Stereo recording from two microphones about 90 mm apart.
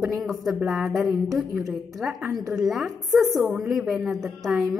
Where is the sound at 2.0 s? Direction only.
10° right (ahead or behind).